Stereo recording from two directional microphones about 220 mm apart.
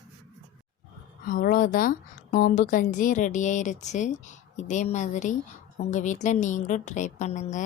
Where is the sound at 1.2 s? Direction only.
40° left (ahead or behind).